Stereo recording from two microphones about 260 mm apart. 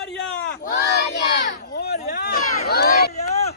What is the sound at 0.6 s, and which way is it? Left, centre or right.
Crowd, left.